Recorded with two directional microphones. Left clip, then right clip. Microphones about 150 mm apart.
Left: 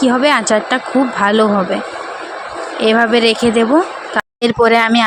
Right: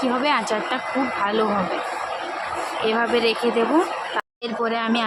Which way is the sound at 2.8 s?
45° left (ahead or behind).